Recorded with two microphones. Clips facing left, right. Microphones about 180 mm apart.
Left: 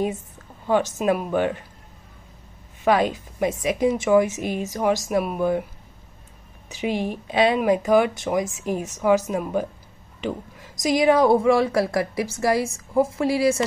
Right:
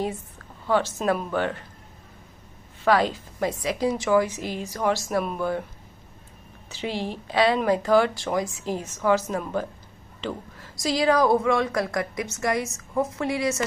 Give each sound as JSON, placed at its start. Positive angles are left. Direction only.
{"t": 0.7, "sound": "a woman's voice", "side_deg": 15}
{"t": 2.8, "sound": "speech", "side_deg": 20}
{"t": 6.7, "sound": "a woman's voice", "side_deg": 15}